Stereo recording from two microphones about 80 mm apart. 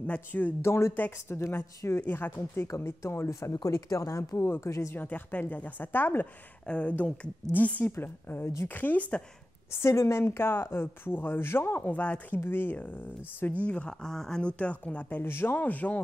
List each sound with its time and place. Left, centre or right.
0.0 s speech: centre
0.6 s speech: left
2.0 s speech: left
4.9 s speech: left
6.6 s speech: centre
9.8 s speech: left; by 13.9 s centre
14.0 s speech: centre